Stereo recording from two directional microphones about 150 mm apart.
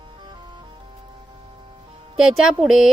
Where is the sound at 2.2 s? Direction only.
Centre (ahead or behind).